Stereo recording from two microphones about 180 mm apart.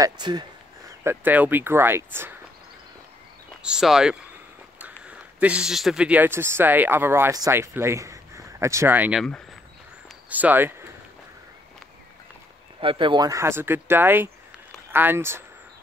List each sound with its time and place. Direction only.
0.0 s a sound: 25° right (ahead or behind)
1.0 s speech: 10° right (ahead or behind)
3.6 s speech: 5° right (ahead or behind)
10.3 s speech: 10° right (ahead or behind)
12.8 s speech: 25° right (ahead or behind)